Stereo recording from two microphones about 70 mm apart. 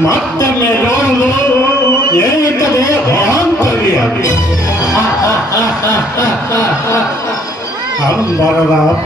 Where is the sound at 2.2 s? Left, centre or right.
Left.